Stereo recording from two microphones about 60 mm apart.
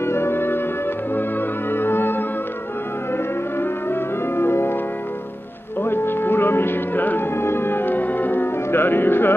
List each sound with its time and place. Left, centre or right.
0.0 s music: left
1.7 s music: left
3.5 s music: left
5.8 s music: left